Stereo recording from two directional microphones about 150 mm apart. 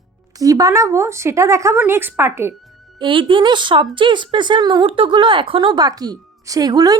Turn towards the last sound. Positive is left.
turn(degrees=-25)  # may be behind; listen again after turning